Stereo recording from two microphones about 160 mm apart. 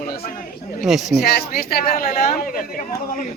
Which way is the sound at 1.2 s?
70° left (ahead or behind).